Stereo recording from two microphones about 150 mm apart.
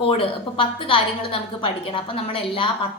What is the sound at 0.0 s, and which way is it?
A woman's voice, 40° left (ahead or behind).